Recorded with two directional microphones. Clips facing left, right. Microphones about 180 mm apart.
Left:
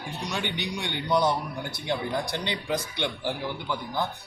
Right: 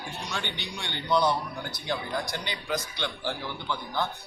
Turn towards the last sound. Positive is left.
turn(degrees=20)  # may be behind; listen again after turning